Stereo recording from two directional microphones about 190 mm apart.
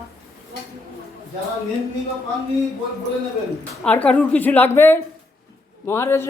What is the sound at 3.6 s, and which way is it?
A man's voice, 5° left (ahead or behind).